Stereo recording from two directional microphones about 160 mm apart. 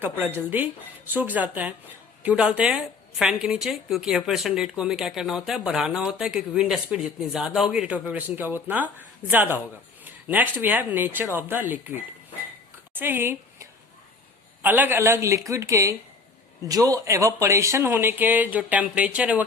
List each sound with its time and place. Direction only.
0.0 s a woman's voice: 15° right (ahead or behind)
10.0 s a sound: 10° right (ahead or behind)
10.6 s speech: 10° right (ahead or behind)